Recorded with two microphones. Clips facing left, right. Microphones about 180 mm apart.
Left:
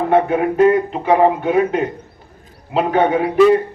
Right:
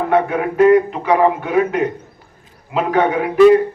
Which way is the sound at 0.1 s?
30° left (ahead or behind).